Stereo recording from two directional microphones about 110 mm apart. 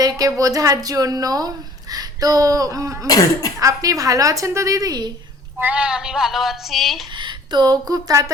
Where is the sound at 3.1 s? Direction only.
35° left (ahead or behind).